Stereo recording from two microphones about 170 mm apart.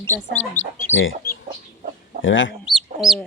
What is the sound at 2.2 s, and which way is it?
Speech, 90° left.